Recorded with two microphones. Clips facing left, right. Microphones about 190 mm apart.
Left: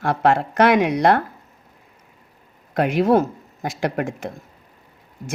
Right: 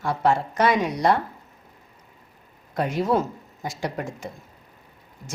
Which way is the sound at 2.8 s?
70° left (ahead or behind).